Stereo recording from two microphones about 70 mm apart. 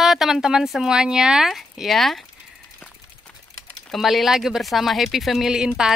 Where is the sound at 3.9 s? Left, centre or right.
Centre.